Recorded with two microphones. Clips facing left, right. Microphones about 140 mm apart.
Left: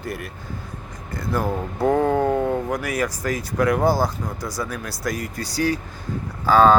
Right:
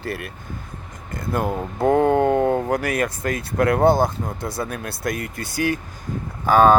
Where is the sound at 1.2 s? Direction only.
20° right (ahead or behind).